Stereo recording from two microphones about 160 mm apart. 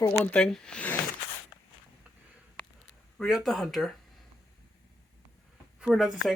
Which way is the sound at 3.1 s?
Centre (ahead or behind).